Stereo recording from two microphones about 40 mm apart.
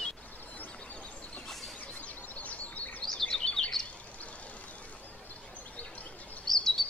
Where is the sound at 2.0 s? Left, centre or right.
Left.